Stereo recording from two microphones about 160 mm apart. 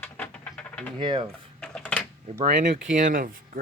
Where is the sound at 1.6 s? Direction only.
5° left (ahead or behind).